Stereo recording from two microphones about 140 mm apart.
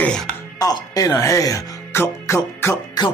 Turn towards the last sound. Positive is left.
turn(degrees=20)  # may be behind; listen again after turning